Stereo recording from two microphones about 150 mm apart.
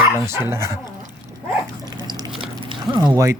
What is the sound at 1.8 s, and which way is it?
Dog, 25° right (ahead or behind).